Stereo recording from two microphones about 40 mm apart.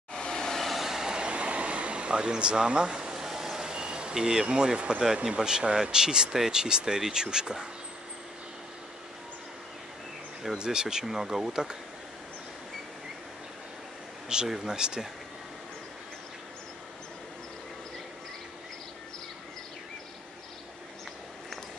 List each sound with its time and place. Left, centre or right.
0.1 s vehicle: centre
0.6 s vehicle: centre
0.8 s train: centre
1.1 s a sound: right
4.5 s speech: right
10.4 s speech: centre
14.3 s speech: centre